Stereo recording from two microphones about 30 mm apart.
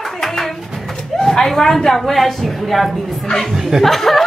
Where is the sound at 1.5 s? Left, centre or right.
Centre.